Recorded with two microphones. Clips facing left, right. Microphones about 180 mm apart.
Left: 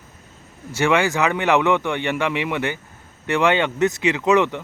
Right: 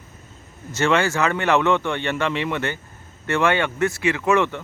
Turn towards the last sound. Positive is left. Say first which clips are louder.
# left 2 dB
turn(degrees=15)  # may be behind; listen again after turning